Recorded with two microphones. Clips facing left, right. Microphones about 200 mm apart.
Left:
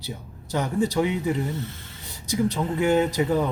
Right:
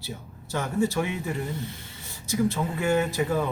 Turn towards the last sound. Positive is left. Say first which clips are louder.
# left 3 dB
turn(degrees=20)  # may be behind; listen again after turning